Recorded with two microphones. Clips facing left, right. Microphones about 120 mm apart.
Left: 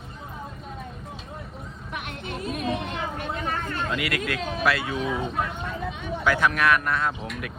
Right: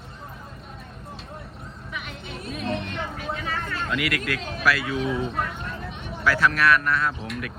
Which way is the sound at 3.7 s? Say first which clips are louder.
Right 1 dB; 25° left (ahead or behind).